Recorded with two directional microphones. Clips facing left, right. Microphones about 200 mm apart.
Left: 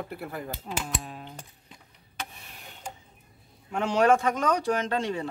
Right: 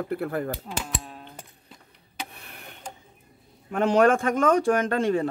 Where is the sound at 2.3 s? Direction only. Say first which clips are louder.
Right 3 dB; 60° right (ahead or behind).